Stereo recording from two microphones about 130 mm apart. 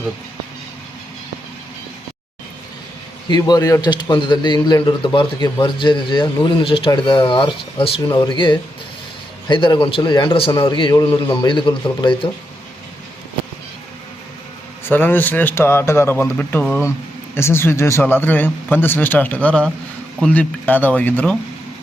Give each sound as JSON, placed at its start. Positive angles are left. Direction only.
{"t": 3.2, "sound": "speech", "side_deg": 30}
{"t": 8.1, "sound": "speech", "side_deg": 35}
{"t": 14.8, "sound": "speech", "side_deg": 15}